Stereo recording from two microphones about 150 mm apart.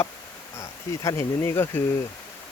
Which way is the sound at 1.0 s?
20° left (ahead or behind).